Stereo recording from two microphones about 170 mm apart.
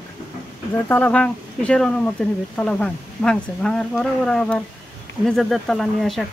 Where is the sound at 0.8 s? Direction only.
10° left (ahead or behind).